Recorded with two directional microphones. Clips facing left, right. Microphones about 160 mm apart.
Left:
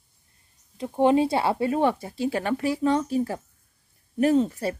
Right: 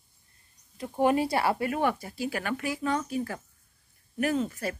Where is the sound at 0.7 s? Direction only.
20° left (ahead or behind).